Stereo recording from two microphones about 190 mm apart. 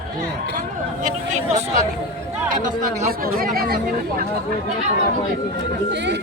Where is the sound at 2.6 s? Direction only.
50° right (ahead or behind).